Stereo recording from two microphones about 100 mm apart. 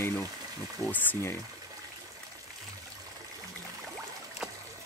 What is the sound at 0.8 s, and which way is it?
Speech, 15° left (ahead or behind).